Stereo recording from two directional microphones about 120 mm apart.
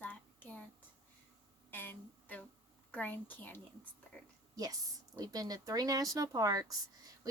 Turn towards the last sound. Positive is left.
turn(degrees=-30)  # may be behind; listen again after turning